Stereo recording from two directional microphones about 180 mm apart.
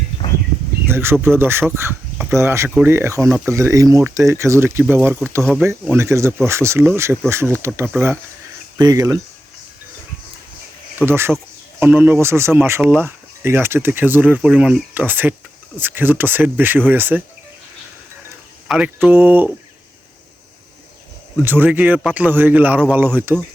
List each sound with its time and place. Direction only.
0.9 s speech: 15° right (ahead or behind)
5.4 s speech: centre (ahead or behind)
5.6 s speech: 15° right (ahead or behind)
11.0 s speech: 15° right (ahead or behind)
18.7 s speech: 5° right (ahead or behind)
21.4 s speech: 10° right (ahead or behind)